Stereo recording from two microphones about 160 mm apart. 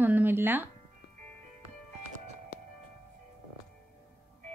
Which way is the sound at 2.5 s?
65° left (ahead or behind).